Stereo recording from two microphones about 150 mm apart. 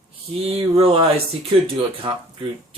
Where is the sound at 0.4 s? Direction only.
40° right (ahead or behind).